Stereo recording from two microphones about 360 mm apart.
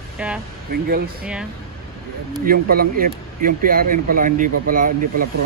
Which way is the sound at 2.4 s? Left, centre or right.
Right.